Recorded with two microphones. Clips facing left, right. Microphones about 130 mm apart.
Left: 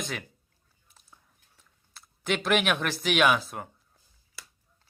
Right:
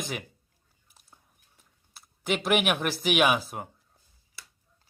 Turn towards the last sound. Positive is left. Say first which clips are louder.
# even
turn(degrees=-10)  # may be behind; listen again after turning